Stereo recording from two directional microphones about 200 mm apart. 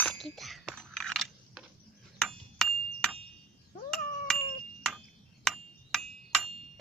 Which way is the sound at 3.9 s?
5° left (ahead or behind).